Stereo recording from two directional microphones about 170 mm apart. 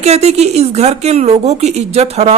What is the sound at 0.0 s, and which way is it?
Speech, 40° right (ahead or behind).